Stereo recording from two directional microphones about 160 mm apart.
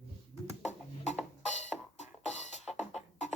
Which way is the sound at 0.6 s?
45° left (ahead or behind).